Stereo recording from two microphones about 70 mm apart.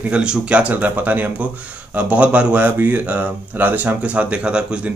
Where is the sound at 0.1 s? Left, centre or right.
Centre.